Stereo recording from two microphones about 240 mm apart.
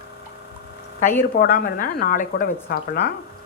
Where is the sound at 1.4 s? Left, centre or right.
Left.